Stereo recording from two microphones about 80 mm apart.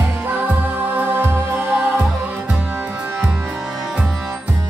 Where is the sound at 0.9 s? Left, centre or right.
Right.